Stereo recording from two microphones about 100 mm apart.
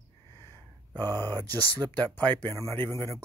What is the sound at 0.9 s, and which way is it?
Speech, 40° right (ahead or behind).